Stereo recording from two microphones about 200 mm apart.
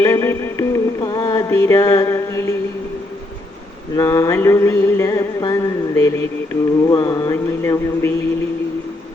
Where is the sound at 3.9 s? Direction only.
15° left (ahead or behind).